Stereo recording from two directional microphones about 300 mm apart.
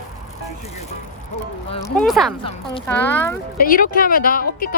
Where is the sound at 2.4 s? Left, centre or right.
Centre.